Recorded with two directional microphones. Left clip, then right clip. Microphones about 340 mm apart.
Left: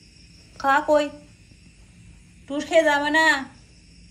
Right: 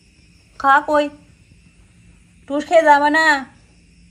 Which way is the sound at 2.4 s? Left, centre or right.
Centre.